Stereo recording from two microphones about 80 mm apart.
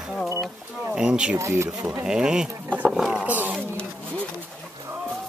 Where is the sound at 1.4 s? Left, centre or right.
Right.